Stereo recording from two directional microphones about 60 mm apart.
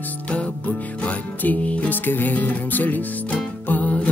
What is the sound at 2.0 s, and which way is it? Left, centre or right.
Music, left.